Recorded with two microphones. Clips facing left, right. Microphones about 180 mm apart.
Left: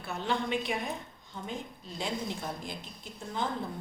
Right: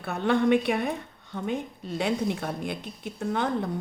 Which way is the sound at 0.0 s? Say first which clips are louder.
Right 9 dB; 60° right (ahead or behind).